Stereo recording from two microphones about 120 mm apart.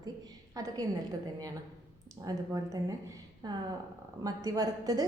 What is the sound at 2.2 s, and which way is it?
A woman's voice, 30° right (ahead or behind).